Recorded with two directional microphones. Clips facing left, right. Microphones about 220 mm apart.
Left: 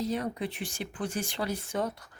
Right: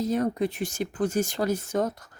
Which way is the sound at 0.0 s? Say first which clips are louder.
Right 6 dB; 45° right (ahead or behind).